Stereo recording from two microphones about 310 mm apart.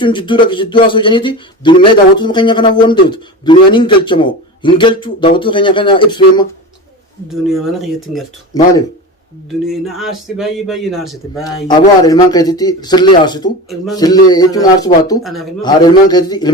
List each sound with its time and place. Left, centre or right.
0.0 s speech: centre
7.3 s speech: centre
8.5 s speech: centre
9.5 s speech: centre
11.4 s speech: centre
15.2 s speech: centre
15.6 s speech: centre